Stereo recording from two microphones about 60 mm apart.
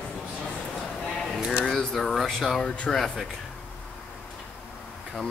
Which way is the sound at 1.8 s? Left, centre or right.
Centre.